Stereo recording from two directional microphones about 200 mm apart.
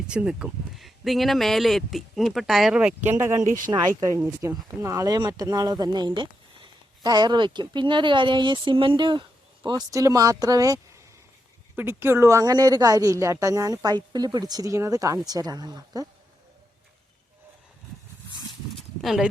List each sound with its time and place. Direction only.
0.1 s speech: 5° right (ahead or behind)
3.4 s speech: 40° right (ahead or behind)
3.7 s speech: 20° right (ahead or behind)
19.0 s speech: centre (ahead or behind)